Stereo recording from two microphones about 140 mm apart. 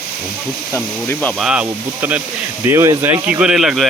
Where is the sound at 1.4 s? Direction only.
10° right (ahead or behind).